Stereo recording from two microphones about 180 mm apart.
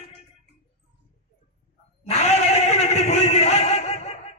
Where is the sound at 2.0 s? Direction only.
35° left (ahead or behind).